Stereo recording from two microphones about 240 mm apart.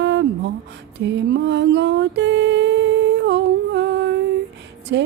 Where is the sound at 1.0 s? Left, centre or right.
Right.